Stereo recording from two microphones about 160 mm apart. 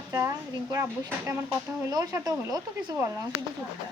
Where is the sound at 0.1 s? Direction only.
20° right (ahead or behind).